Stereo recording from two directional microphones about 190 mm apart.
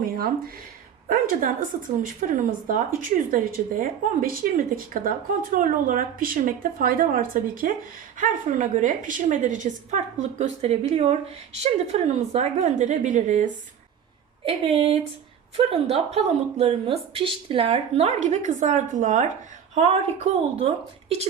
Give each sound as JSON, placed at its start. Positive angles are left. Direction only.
{"t": 0.0, "sound": "a woman's voice", "side_deg": -50}
{"t": 14.4, "sound": "speech", "side_deg": -30}